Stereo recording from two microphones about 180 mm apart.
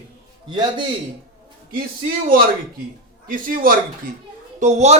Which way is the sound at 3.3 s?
50° right (ahead or behind).